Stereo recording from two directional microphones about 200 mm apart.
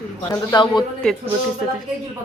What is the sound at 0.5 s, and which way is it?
Speech, 20° left (ahead or behind).